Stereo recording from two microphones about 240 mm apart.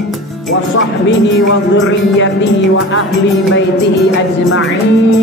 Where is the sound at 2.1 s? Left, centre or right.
Left.